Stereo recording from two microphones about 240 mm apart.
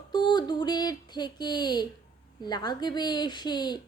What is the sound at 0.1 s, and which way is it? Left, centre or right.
Speech, centre.